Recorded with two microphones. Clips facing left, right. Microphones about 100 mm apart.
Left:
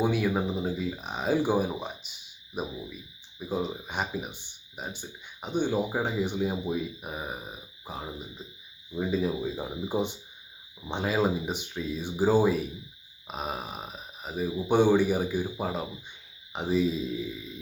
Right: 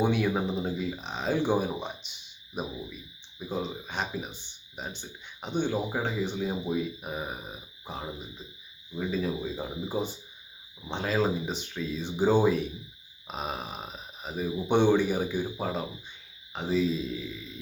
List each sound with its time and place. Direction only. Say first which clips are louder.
0.0 s speech: even; 5° left (ahead or behind)
1.0 s speech: left 2 dB; 10° left (ahead or behind)
8.9 s speech: left 2 dB; 15° left (ahead or behind)